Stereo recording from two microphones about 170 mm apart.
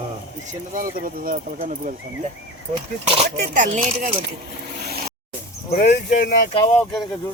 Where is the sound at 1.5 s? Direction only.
45° right (ahead or behind).